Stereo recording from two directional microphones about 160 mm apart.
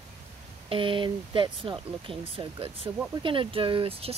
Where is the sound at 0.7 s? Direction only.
35° right (ahead or behind).